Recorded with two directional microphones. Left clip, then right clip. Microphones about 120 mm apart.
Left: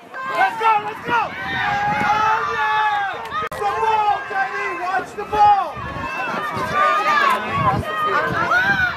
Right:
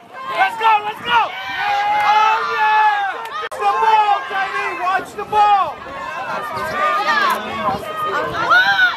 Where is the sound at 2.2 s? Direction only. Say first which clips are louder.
Right 3 dB; 60° right (ahead or behind).